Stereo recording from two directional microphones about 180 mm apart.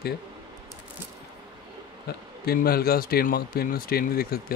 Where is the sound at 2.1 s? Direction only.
60° left (ahead or behind).